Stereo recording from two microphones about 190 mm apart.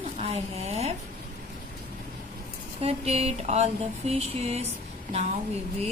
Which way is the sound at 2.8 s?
35° right (ahead or behind).